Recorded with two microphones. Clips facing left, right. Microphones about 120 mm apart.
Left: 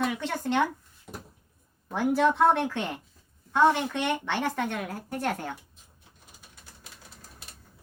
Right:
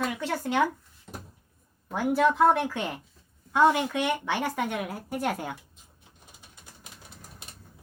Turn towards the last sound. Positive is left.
turn(degrees=-20)  # may be behind; listen again after turning